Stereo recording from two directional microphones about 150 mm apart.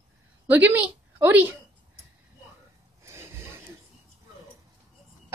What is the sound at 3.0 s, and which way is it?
Rub, 15° right (ahead or behind).